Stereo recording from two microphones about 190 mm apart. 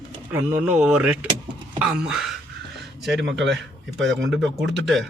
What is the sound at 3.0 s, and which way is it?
Speech, 65° right (ahead or behind).